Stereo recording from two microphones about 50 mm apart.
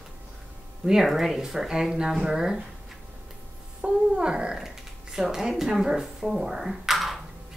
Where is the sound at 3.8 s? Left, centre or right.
Centre.